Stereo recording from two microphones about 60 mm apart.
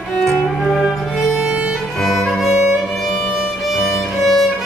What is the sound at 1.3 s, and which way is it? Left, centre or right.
Music, centre.